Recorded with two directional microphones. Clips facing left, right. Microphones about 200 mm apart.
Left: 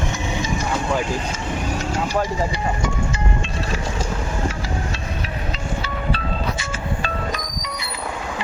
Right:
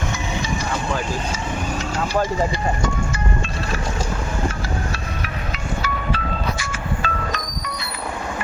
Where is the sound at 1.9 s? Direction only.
15° left (ahead or behind).